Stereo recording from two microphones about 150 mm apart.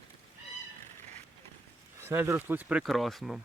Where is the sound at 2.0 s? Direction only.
15° right (ahead or behind); by 3.4 s centre (ahead or behind).